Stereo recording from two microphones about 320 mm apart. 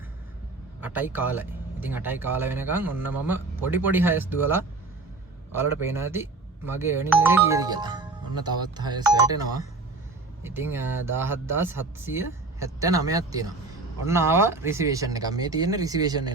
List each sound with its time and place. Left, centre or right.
0.8 s speech: centre